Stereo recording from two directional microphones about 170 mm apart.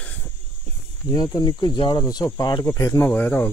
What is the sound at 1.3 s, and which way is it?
Speech, 25° left (ahead or behind).